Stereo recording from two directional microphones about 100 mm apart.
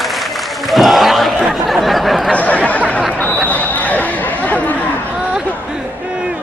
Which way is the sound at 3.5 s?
15° left (ahead or behind).